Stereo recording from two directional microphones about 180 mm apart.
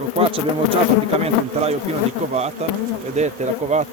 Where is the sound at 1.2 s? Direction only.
35° right (ahead or behind).